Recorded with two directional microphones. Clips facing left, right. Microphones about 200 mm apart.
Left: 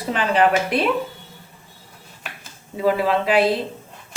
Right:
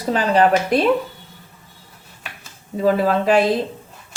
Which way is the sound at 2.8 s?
45° right (ahead or behind).